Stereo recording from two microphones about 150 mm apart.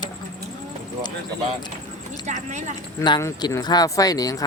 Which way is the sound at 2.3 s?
55° right (ahead or behind).